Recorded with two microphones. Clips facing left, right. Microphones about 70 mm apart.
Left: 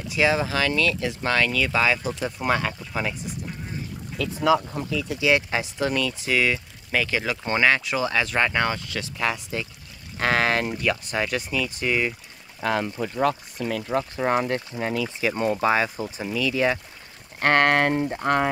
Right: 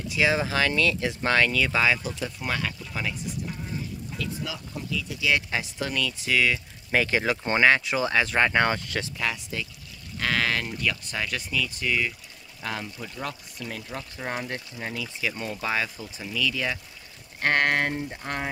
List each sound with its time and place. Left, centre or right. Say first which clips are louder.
0.3 s speech: left 1 dB; centre
2.2 s speech: left 7 dB; left
4.2 s speech: left 14 dB; left
5.2 s speech: left 4 dB; centre
6.9 s speech: right 1 dB; right
8.6 s speech: right 1 dB; right
9.2 s speech: left 8 dB; centre
10.1 s speech: left 4 dB; left
12.5 s speech: left 9 dB; left
13.7 s speech: left 11 dB; left
15.0 s speech: left 6 dB; left
17.4 s speech: left 4 dB; left